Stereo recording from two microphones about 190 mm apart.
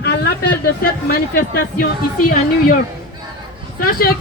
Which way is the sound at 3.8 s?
50° left (ahead or behind).